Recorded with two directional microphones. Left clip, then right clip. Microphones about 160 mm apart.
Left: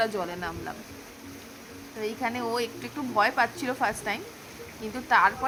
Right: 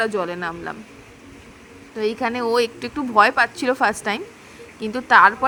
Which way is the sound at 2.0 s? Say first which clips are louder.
Right 8 dB; 35° right (ahead or behind).